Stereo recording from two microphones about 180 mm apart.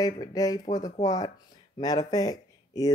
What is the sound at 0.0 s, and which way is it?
Speech, 20° left (ahead or behind).